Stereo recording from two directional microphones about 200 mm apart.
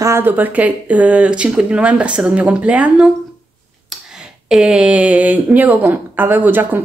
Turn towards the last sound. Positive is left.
turn(degrees=-10)  # may be behind; listen again after turning